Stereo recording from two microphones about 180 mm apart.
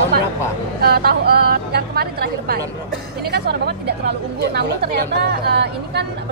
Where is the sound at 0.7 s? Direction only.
60° right (ahead or behind).